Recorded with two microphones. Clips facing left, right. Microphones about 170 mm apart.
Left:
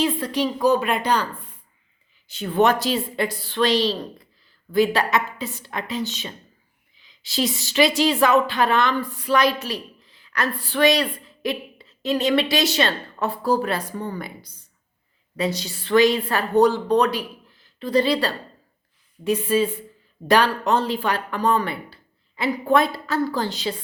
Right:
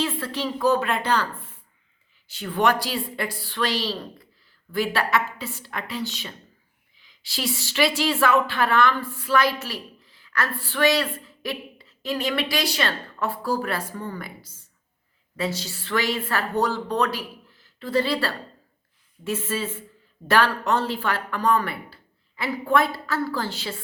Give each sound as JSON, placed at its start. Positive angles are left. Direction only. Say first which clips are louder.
{"t": 0.0, "sound": "a woman's voice", "louder": "left 5 dB", "side_deg": 15}